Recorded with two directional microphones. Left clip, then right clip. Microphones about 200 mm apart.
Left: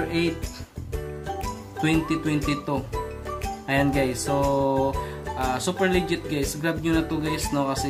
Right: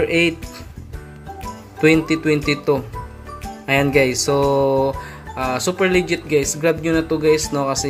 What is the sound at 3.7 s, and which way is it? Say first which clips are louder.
Speech: right 8 dB; 15° right (ahead or behind).